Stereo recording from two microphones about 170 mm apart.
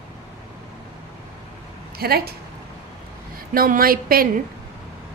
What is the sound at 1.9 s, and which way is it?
Speech, 65° right (ahead or behind).